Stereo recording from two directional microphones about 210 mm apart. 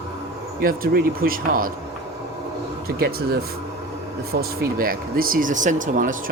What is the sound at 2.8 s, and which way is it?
Speech, 45° right (ahead or behind).